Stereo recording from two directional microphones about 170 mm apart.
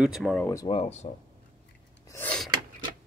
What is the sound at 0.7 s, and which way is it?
Speech, 40° left (ahead or behind).